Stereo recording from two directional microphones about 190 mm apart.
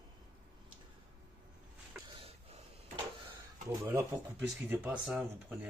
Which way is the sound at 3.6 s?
15° right (ahead or behind).